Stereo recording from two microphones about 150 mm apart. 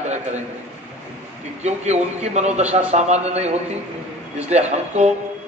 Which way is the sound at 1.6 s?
50° right (ahead or behind).